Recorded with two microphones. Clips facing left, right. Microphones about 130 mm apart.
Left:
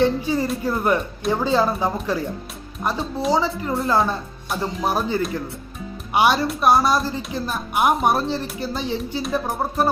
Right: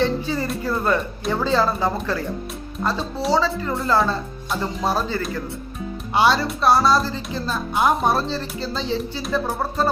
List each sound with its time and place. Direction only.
0.0 s speech: 15° left (ahead or behind)